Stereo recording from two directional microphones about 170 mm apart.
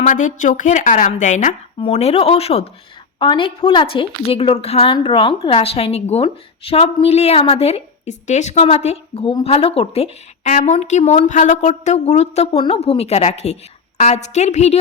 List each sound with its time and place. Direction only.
0.0 s a woman's voice: 50° left (ahead or behind)